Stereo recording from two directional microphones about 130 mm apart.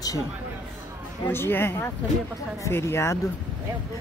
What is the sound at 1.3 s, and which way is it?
Speech, 15° left (ahead or behind).